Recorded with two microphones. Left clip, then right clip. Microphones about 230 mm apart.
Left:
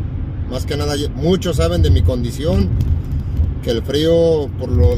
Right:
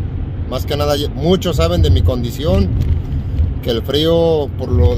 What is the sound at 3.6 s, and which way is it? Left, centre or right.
Speech, centre.